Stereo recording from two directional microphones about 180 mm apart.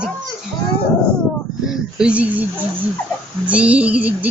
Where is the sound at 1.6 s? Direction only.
5° right (ahead or behind).